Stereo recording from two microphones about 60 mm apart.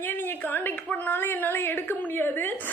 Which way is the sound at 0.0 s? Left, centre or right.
Left.